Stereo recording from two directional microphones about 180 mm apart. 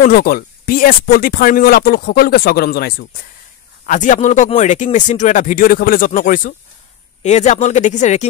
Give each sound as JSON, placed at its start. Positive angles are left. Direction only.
{"t": 0.0, "sound": "speech", "side_deg": 55}